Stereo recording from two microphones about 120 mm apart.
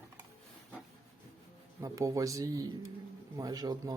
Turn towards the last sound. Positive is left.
turn(degrees=-35)  # may be behind; listen again after turning